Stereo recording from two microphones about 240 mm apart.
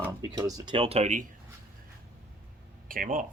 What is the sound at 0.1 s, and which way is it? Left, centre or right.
Speech, centre.